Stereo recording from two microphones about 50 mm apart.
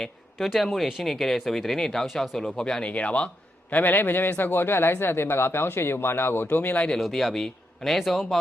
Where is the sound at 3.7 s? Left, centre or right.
Left.